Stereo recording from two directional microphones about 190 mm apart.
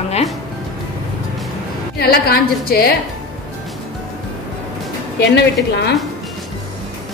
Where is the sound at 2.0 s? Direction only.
55° left (ahead or behind).